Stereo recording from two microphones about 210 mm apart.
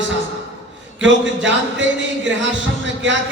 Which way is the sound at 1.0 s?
60° right (ahead or behind).